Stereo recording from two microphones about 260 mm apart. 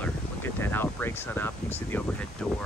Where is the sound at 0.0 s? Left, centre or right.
Centre.